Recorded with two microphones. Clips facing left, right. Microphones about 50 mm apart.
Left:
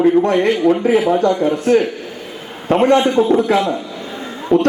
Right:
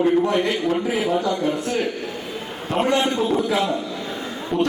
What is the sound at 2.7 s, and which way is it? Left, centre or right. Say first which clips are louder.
Speech: left 8 dB; left.